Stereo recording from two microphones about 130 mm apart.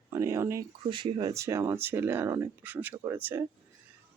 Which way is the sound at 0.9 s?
35° right (ahead or behind).